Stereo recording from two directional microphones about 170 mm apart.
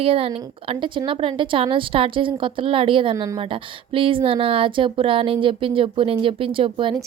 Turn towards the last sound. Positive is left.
turn(degrees=-30)  # may be behind; listen again after turning